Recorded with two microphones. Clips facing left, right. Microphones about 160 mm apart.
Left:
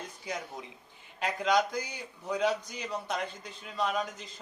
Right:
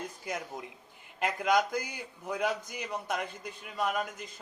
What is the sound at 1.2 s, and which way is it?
Speech, 10° right (ahead or behind).